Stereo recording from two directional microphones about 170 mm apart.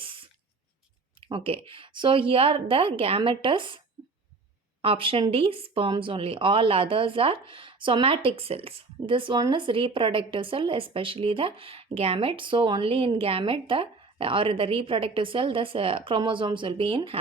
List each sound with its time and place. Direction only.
0.0 s a sound: 30° right (ahead or behind)
1.3 s speech: 35° right (ahead or behind)
4.8 s speech: 30° right (ahead or behind)